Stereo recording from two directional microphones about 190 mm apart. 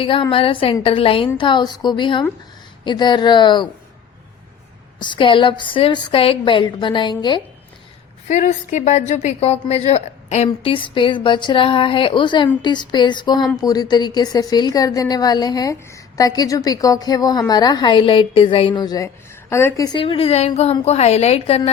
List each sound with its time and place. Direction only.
0.0 s a woman's voice: 25° left (ahead or behind)
4.9 s a woman's voice: 25° left (ahead or behind)
8.3 s a woman's voice: 40° left (ahead or behind)